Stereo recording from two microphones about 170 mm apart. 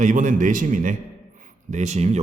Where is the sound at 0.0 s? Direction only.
50° right (ahead or behind).